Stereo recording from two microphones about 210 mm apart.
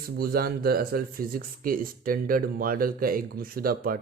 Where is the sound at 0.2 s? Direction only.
45° right (ahead or behind).